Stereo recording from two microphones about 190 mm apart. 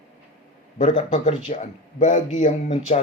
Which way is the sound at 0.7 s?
30° left (ahead or behind).